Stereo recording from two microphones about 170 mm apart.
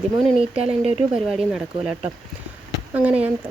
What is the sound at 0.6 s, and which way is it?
Speech, 35° right (ahead or behind).